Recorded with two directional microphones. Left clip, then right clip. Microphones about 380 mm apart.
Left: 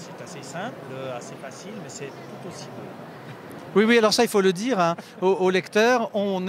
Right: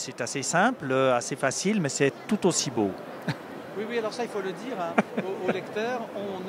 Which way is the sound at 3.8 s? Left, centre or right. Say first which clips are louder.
Left 12 dB; left.